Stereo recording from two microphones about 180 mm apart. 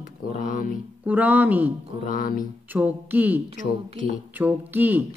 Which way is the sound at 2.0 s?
50° left (ahead or behind).